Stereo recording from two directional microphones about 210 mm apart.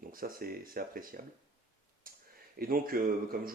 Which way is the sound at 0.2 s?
45° right (ahead or behind).